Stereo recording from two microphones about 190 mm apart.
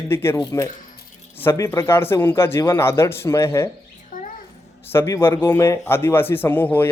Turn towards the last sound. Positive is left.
turn(degrees=10)  # may be behind; listen again after turning